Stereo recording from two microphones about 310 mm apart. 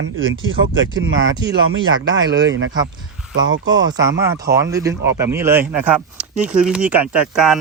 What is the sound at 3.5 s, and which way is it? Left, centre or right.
Speech, right.